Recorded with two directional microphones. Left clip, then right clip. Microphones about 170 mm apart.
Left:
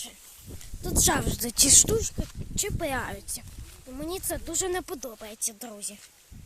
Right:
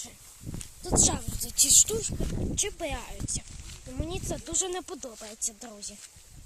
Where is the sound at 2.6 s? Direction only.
15° left (ahead or behind).